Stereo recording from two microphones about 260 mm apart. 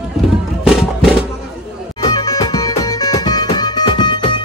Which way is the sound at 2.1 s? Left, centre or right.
Centre.